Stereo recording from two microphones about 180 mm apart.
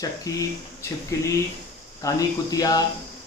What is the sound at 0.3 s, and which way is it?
Speech, 20° left (ahead or behind).